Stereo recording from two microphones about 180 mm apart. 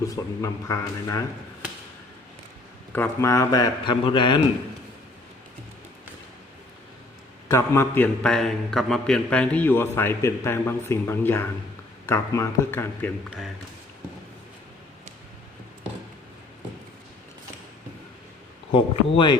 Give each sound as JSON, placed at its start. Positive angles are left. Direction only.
{"t": 0.0, "sound": "a man's voice", "side_deg": 15}
{"t": 2.9, "sound": "a man's voice", "side_deg": 15}
{"t": 7.4, "sound": "a man's voice", "side_deg": 15}
{"t": 18.7, "sound": "a man's voice", "side_deg": 30}